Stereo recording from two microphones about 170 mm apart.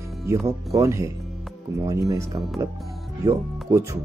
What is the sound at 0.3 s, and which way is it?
Speech, 15° right (ahead or behind).